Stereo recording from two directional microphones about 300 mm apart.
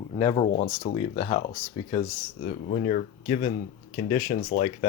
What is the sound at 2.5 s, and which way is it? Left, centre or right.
Speech, left.